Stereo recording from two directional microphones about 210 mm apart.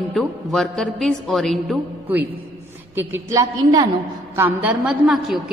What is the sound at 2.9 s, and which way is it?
A woman's voice, 10° right (ahead or behind).